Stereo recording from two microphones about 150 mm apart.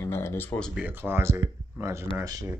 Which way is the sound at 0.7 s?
10° right (ahead or behind).